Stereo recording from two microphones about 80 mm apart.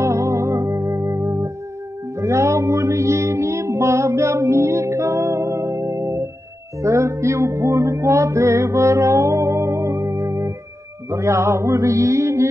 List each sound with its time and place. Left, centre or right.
0.0 s music: right